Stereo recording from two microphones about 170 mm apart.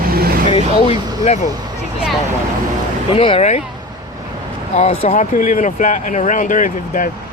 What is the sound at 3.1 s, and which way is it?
Speech, 30° left (ahead or behind).